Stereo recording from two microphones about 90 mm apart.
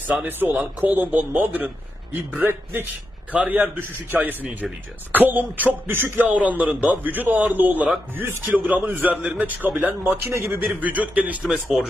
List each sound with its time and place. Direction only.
0.3 s a man's voice: 20° right (ahead or behind)
10.0 s a man's voice: 30° right (ahead or behind)
10.8 s a man's voice: 15° right (ahead or behind)
11.5 s speech: centre (ahead or behind)